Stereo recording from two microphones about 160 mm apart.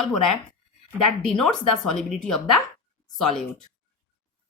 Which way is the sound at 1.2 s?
5° left (ahead or behind).